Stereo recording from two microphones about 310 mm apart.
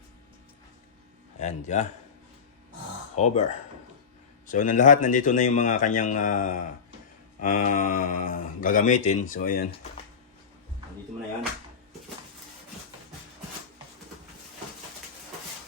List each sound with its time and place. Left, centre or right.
1.4 s speech: left
3.2 s speech: left
4.4 s speech: left